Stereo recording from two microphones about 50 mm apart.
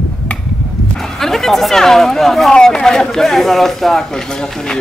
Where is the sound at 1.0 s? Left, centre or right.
Centre.